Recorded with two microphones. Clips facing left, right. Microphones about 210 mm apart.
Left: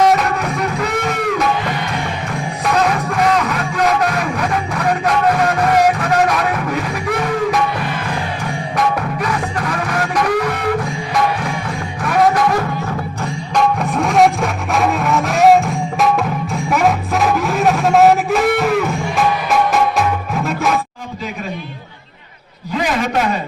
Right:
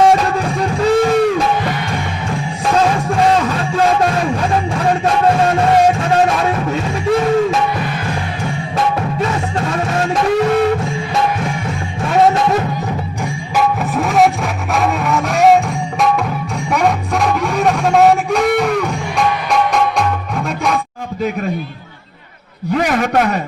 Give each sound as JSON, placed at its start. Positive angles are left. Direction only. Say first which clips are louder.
{"t": 0.0, "sound": "music", "louder": "right 2 dB", "side_deg": -30}
{"t": 2.6, "sound": "music", "louder": "right 2 dB", "side_deg": -30}
{"t": 8.7, "sound": "music", "louder": "even", "side_deg": -25}
{"t": 12.0, "sound": "music", "louder": "right 2 dB", "side_deg": -25}
{"t": 13.6, "sound": "music", "louder": "even", "side_deg": 0}
{"t": 22.7, "sound": "a sound", "louder": "right 3 dB", "side_deg": -55}